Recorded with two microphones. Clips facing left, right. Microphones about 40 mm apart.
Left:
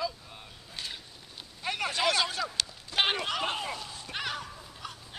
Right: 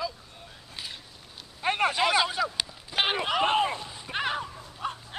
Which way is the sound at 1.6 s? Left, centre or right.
Right.